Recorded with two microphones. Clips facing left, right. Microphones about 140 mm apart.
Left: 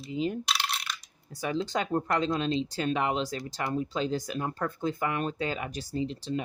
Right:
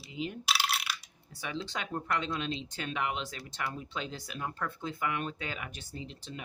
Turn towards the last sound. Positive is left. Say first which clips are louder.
# left 12 dB
turn(degrees=35)  # may be behind; listen again after turning